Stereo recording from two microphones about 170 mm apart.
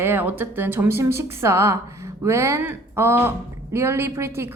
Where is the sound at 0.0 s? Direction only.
10° right (ahead or behind).